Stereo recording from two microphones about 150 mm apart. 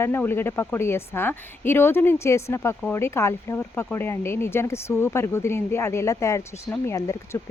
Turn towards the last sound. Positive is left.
turn(degrees=20)  # may be behind; listen again after turning